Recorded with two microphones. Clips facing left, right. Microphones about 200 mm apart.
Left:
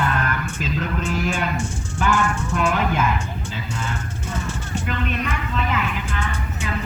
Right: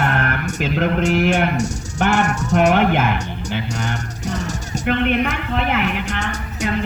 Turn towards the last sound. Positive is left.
turn(degrees=-75)  # may be behind; listen again after turning